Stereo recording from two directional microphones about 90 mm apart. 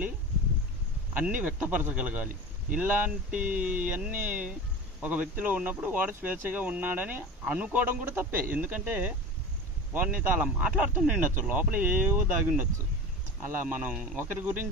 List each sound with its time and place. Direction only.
1.1 s speech: 15° right (ahead or behind)
13.9 s speech: 10° right (ahead or behind)
14.2 s speech: 20° right (ahead or behind)